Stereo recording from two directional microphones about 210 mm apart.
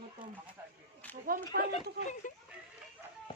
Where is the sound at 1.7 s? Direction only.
35° left (ahead or behind).